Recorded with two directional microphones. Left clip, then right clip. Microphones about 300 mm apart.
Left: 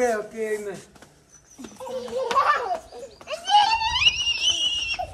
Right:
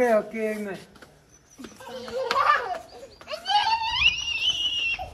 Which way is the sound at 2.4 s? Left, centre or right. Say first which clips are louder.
Even; left.